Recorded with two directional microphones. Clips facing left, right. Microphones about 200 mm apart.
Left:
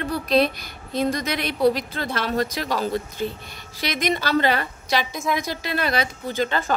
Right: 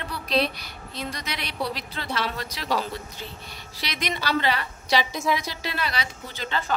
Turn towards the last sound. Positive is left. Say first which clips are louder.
# left 7 dB
turn(degrees=50)  # may be behind; listen again after turning